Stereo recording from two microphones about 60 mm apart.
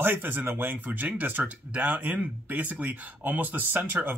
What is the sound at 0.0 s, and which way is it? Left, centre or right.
Speech, right.